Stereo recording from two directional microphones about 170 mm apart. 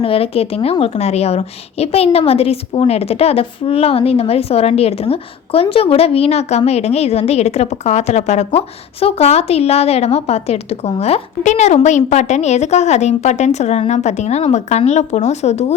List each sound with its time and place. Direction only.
0.0 s a woman's voice: 35° left (ahead or behind)